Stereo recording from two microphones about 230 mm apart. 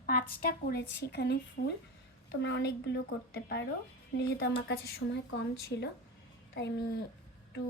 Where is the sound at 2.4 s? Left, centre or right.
Left.